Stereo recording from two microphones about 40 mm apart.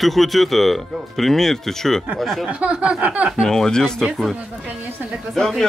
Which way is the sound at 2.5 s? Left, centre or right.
Right.